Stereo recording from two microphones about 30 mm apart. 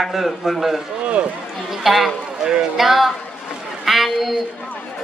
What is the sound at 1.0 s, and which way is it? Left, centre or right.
Speech, right.